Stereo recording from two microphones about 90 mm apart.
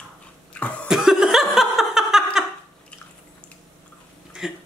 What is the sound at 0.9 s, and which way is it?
Laughter, 5° right (ahead or behind).